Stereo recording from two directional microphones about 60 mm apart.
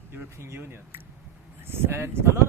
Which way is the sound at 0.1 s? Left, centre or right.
Right.